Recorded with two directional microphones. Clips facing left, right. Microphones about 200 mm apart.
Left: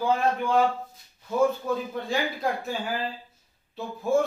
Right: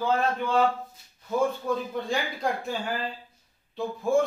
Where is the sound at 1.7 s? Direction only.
5° left (ahead or behind).